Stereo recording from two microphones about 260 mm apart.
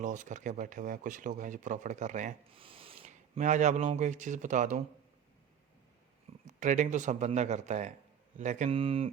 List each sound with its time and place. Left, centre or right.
0.0 s speech: right
6.5 s speech: right